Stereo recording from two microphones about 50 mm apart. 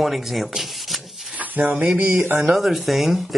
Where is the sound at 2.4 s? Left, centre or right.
Centre.